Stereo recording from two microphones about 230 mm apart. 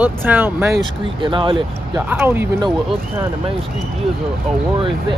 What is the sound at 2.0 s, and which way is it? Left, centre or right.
Speech, centre.